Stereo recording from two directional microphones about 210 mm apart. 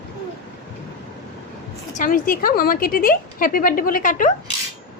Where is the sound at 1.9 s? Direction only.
40° left (ahead or behind).